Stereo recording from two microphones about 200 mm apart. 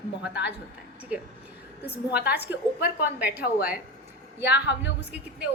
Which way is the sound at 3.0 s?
10° right (ahead or behind).